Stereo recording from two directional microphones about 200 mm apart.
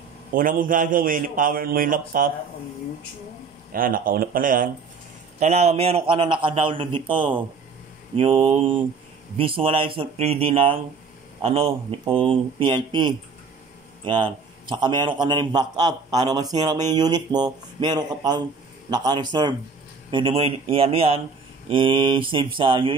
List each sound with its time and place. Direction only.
0.3 s a man's voice: 45° right (ahead or behind)
3.7 s a man's voice: 45° right (ahead or behind); by 22.9 s 25° right (ahead or behind)